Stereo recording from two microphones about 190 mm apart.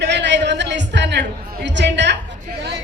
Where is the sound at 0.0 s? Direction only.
65° right (ahead or behind).